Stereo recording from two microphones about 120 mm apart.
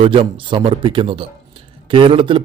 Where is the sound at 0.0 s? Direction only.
45° right (ahead or behind).